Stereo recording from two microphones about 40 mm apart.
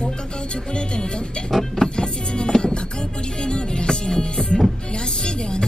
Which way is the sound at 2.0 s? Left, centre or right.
Left.